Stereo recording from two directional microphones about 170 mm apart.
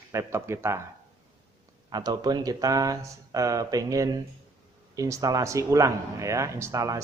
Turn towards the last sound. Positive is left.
turn(degrees=-20)  # may be behind; listen again after turning